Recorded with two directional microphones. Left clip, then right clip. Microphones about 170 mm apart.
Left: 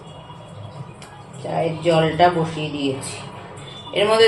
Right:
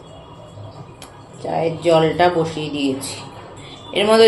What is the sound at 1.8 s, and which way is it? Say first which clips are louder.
Speech: right 1 dB; 25° right (ahead or behind).